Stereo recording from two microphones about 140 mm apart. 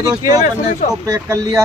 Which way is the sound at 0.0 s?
25° right (ahead or behind).